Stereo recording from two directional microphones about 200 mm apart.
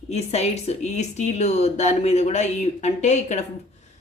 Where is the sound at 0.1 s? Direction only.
30° left (ahead or behind).